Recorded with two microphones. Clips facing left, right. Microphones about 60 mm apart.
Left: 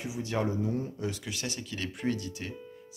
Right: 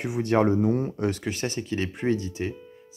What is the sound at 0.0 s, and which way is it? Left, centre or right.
Speech, right.